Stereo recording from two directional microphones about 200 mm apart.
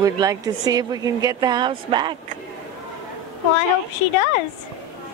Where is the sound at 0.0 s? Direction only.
15° right (ahead or behind).